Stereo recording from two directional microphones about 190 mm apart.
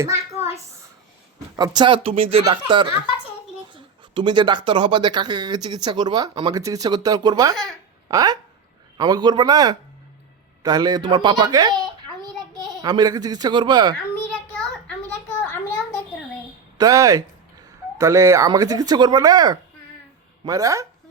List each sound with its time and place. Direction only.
0.0 s a sound: 15° right (ahead or behind)
1.5 s speech: 20° right (ahead or behind)
4.1 s speech: 25° right (ahead or behind)
7.5 s speech: centre (ahead or behind)
8.0 s speech: 20° right (ahead or behind)
14.3 s child singing: 5° left (ahead or behind)
16.7 s a woman's voice: 20° right (ahead or behind)